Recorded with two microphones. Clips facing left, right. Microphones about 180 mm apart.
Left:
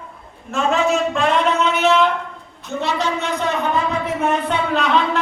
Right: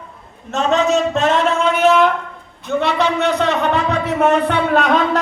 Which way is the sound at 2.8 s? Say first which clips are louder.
Right 4 dB; 65° right (ahead or behind).